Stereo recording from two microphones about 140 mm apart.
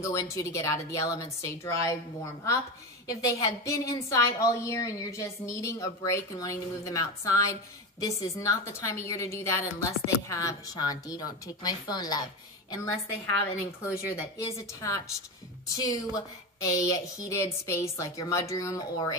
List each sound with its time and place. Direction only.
0.0 s a woman's voice: 25° left (ahead or behind)
3.1 s a woman's voice: 25° left (ahead or behind)
13.8 s a woman's voice: 20° left (ahead or behind)